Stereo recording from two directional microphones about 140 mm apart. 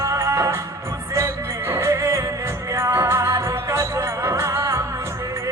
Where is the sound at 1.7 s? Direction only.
20° right (ahead or behind).